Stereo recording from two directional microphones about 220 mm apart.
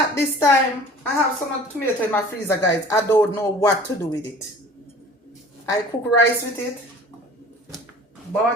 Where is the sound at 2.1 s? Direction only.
10° left (ahead or behind).